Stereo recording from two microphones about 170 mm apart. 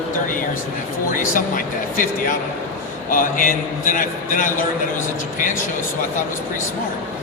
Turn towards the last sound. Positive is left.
turn(degrees=50)  # may be behind; listen again after turning